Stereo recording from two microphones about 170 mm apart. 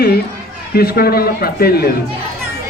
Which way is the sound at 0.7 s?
65° left (ahead or behind).